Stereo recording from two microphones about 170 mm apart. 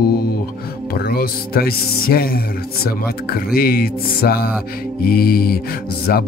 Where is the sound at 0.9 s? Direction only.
65° left (ahead or behind).